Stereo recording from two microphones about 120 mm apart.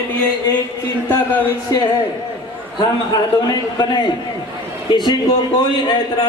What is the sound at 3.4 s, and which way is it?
Speech, 35° left (ahead or behind).